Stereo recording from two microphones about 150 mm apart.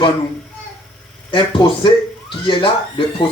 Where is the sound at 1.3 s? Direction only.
35° left (ahead or behind).